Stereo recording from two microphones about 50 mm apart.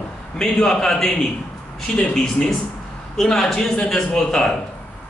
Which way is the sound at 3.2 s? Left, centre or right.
Centre.